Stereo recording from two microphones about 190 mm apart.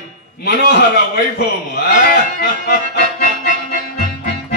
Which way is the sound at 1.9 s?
50° left (ahead or behind).